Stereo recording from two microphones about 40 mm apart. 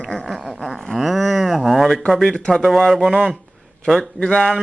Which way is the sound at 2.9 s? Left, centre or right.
Centre.